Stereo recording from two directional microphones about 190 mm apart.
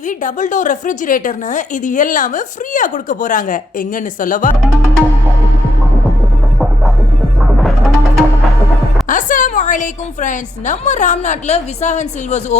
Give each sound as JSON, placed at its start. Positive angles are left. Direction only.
{"t": 0.1, "sound": "a woman's voice", "side_deg": 45}
{"t": 7.5, "sound": "music", "side_deg": 0}
{"t": 9.0, "sound": "a woman's voice", "side_deg": 45}